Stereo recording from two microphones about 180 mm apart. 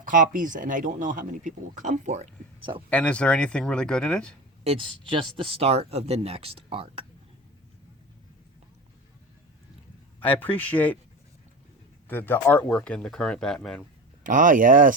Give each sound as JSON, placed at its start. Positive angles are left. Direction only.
{"t": 0.0, "sound": "speech", "side_deg": -50}
{"t": 2.9, "sound": "speech", "side_deg": 5}
{"t": 4.6, "sound": "speech", "side_deg": -30}
{"t": 10.2, "sound": "speech", "side_deg": 10}
{"t": 12.0, "sound": "speech", "side_deg": 10}
{"t": 14.3, "sound": "speech", "side_deg": -45}